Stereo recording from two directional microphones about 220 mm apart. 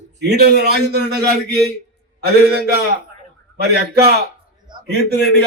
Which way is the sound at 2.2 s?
45° right (ahead or behind).